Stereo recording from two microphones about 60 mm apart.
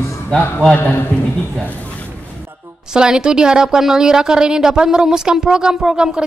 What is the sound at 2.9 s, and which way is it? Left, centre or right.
A woman's voice, centre.